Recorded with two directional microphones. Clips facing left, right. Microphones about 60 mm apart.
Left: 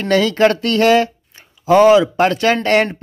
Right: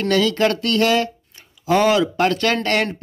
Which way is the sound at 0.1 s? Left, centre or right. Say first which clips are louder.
Left 5 dB; left.